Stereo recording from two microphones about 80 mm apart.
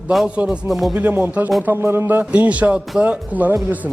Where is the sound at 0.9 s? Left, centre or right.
Right.